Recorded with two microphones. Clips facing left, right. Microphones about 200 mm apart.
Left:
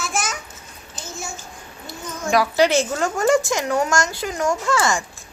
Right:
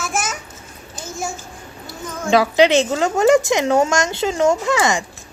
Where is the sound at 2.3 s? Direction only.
25° right (ahead or behind).